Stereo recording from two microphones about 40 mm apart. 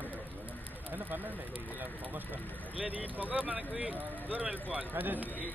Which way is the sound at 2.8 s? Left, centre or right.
Right.